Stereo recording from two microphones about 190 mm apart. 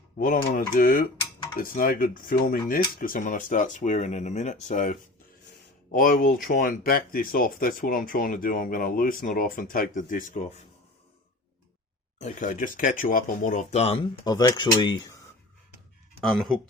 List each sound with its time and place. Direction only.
0.2 s speech: 45° left (ahead or behind)
12.2 s speech: 40° left (ahead or behind)
14.3 s speech: 20° left (ahead or behind)
16.2 s speech: centre (ahead or behind)